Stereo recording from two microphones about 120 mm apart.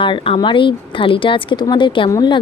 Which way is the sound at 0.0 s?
45° left (ahead or behind).